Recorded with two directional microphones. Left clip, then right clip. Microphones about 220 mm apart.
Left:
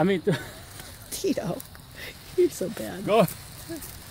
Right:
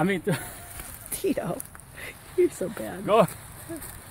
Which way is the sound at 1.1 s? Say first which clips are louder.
Even; centre (ahead or behind).